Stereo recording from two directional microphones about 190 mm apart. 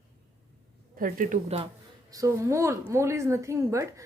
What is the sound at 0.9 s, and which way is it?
Speech, 45° right (ahead or behind).